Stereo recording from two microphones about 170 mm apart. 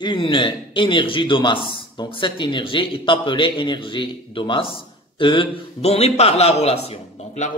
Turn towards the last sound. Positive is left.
turn(degrees=40)  # may be behind; listen again after turning